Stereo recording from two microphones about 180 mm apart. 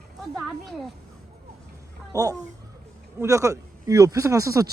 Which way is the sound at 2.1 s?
20° right (ahead or behind).